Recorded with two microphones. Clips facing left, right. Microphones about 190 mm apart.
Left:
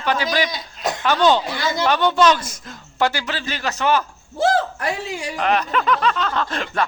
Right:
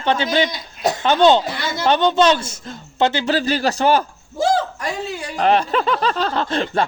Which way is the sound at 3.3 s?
35° right (ahead or behind).